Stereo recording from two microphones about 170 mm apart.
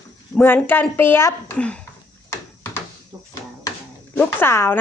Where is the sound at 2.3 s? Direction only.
15° left (ahead or behind).